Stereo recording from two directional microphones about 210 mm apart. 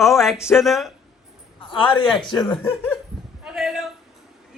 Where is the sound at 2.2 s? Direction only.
20° left (ahead or behind).